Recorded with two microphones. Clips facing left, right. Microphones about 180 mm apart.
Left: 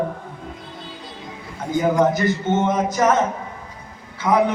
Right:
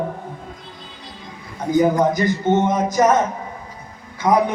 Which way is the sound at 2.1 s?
15° right (ahead or behind).